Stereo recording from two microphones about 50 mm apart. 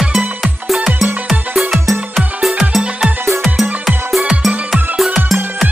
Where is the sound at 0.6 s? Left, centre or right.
Centre.